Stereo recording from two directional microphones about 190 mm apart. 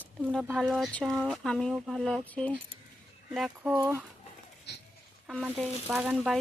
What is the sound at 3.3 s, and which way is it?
Speech, 5° right (ahead or behind).